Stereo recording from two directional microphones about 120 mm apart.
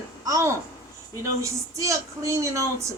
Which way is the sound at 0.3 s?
25° right (ahead or behind).